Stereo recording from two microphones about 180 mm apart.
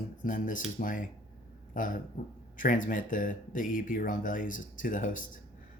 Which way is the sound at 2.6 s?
45° left (ahead or behind).